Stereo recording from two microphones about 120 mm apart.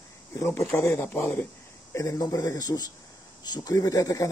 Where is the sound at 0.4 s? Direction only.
20° left (ahead or behind).